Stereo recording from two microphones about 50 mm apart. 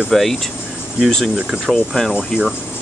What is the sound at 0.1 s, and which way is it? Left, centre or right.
Speech, centre.